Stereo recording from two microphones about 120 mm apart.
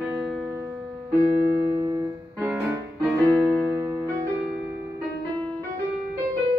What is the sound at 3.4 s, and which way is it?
Music, 5° right (ahead or behind).